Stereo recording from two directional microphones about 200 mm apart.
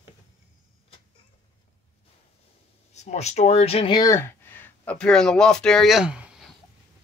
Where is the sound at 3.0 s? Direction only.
35° left (ahead or behind); by 6.6 s centre (ahead or behind).